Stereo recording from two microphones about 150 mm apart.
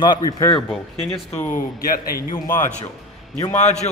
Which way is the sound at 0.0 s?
25° left (ahead or behind).